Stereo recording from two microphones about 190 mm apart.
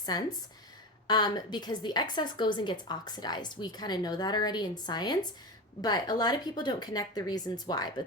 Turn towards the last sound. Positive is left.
turn(degrees=20)  # may be behind; listen again after turning